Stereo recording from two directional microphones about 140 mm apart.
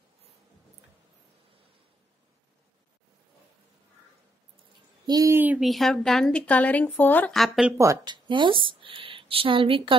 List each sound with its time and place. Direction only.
5.0 s speech: 25° right (ahead or behind)
5.6 s a woman's voice: centre (ahead or behind)
7.3 s speech: centre (ahead or behind)
7.7 s speech: 25° right (ahead or behind); by 9.9 s 40° right (ahead or behind)